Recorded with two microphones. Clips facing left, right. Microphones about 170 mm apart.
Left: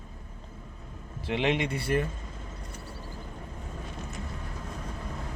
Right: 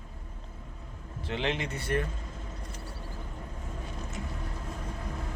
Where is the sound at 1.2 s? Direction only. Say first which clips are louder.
Left 4 dB; 10° left (ahead or behind).